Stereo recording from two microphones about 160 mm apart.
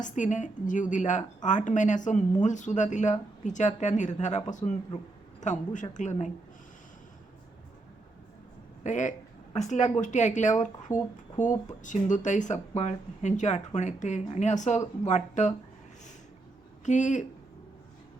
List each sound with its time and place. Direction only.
0.0 s a woman's voice: 50° left (ahead or behind)
8.8 s a woman's voice: 50° left (ahead or behind)
16.8 s a woman's voice: 50° left (ahead or behind)